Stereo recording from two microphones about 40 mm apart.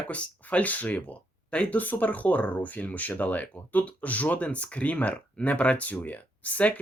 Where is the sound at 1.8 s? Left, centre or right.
Left.